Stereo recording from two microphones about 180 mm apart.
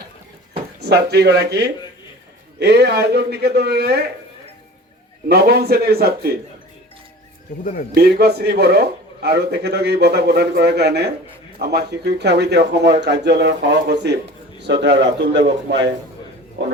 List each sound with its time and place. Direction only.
0.9 s a man's voice: 60° right (ahead or behind)
5.3 s a man's voice: 60° right (ahead or behind)
7.6 s speech: 50° left (ahead or behind)
7.9 s a man's voice: 60° right (ahead or behind); by 15.9 s 80° right
16.6 s speech: 90° right